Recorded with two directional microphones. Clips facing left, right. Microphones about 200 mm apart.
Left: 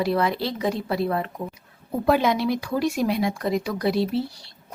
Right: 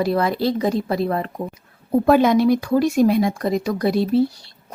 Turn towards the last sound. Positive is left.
turn(degrees=-45)  # may be behind; listen again after turning